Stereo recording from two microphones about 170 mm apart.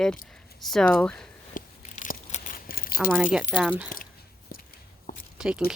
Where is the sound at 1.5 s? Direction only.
50° left (ahead or behind).